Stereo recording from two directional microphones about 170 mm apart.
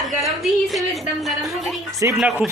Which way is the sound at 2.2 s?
5° right (ahead or behind).